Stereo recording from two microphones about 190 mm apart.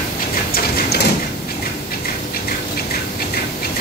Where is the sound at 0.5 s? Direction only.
55° left (ahead or behind).